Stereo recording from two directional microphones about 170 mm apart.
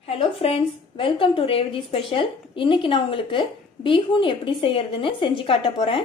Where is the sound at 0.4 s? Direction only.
35° left (ahead or behind).